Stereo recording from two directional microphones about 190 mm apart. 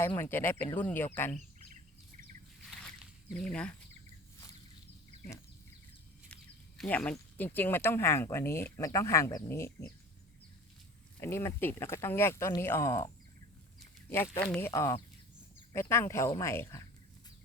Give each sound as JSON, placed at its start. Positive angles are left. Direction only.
{"t": 0.0, "sound": "speech", "side_deg": 10}
{"t": 1.4, "sound": "bird vocalization", "side_deg": -40}
{"t": 2.6, "sound": "a sound", "side_deg": 0}
{"t": 6.2, "sound": "speech", "side_deg": 5}
{"t": 11.2, "sound": "speech", "side_deg": 15}
{"t": 14.4, "sound": "speech", "side_deg": 5}
{"t": 14.7, "sound": "speech", "side_deg": 20}